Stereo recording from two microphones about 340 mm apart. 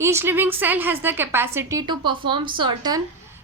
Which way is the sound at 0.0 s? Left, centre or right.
Centre.